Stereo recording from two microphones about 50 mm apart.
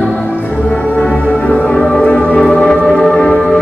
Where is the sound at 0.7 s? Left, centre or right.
Left.